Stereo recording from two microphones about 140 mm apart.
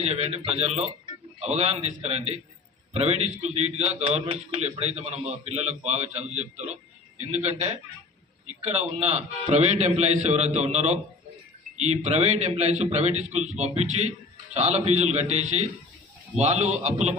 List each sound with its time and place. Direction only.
0.0 s a man's voice: 50° right (ahead or behind)